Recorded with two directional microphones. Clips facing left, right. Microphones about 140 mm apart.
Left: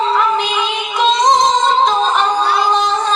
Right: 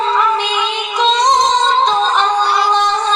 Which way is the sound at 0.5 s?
Centre (ahead or behind).